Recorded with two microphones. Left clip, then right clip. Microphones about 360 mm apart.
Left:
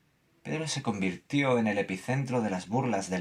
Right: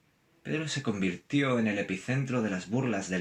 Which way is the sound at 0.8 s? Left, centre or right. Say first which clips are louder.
Even; centre.